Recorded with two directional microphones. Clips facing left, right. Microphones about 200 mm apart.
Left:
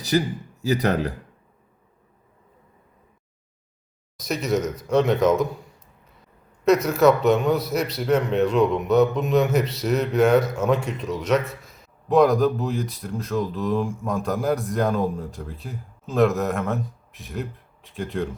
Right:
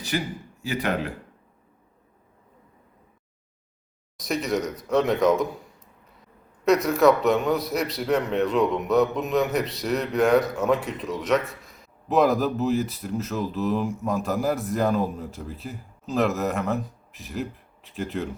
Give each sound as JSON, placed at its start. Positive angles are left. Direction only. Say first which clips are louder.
{"t": 0.1, "sound": "speech", "louder": "left 7 dB", "side_deg": 35}
{"t": 4.2, "sound": "a man's voice", "louder": "left 2 dB", "side_deg": 0}
{"t": 6.7, "sound": "a man's voice", "louder": "left 1 dB", "side_deg": 0}